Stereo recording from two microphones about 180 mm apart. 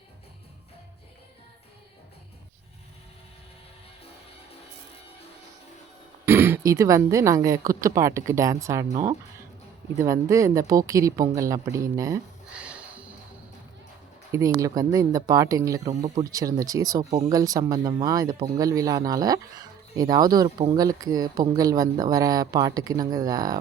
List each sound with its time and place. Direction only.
6.2 s speech: 15° right (ahead or behind)
10.0 s speech: 15° right (ahead or behind)
12.5 s a sound: 5° right (ahead or behind)
14.3 s speech: 20° right (ahead or behind)
15.9 s speech: 35° right (ahead or behind)
16.3 s speech: 20° right (ahead or behind)
17.1 s speech: 35° right (ahead or behind)
17.3 s speech: 20° right (ahead or behind)